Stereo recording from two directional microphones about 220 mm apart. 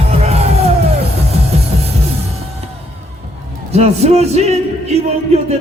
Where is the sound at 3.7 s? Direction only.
30° right (ahead or behind).